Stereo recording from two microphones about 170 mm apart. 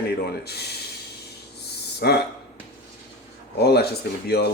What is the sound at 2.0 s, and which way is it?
Speech, 70° left (ahead or behind).